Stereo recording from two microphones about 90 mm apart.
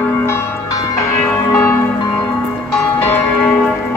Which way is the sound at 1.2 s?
20° left (ahead or behind).